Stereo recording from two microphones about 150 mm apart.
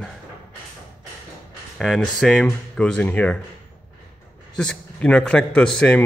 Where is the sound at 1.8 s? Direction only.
Centre (ahead or behind).